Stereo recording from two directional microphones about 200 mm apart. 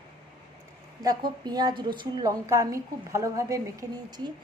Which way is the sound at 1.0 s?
20° right (ahead or behind).